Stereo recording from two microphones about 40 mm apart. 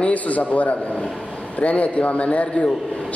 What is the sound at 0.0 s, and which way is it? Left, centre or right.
A man's voice, left.